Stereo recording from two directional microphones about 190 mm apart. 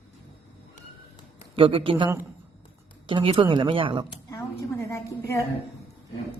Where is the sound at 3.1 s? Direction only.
30° right (ahead or behind).